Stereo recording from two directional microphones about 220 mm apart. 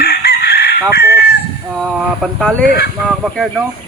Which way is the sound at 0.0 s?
45° left (ahead or behind).